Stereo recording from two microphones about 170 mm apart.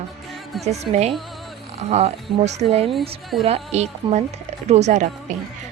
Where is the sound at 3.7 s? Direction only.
40° right (ahead or behind).